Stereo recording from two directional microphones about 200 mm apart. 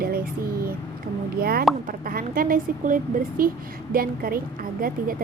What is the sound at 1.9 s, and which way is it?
A woman's voice, 45° right (ahead or behind).